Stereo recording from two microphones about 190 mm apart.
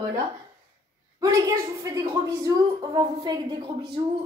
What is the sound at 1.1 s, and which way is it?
Speech, 15° right (ahead or behind).